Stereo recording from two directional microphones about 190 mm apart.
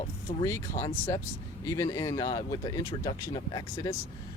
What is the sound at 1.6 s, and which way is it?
Speech, 15° left (ahead or behind).